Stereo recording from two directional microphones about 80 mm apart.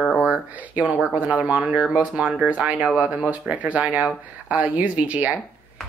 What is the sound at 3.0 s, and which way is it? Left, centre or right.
Speech, centre.